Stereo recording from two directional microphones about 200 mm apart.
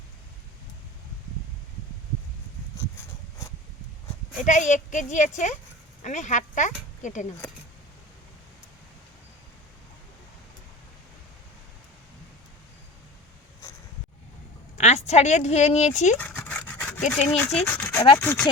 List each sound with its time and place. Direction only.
4.4 s speech: 40° left (ahead or behind)
14.8 s speech: 35° left (ahead or behind)
16.1 s dog: 10° left (ahead or behind)
17.1 s speech: 5° left (ahead or behind); by 18.2 s 20° left (ahead or behind)
18.2 s speech: 10° left (ahead or behind)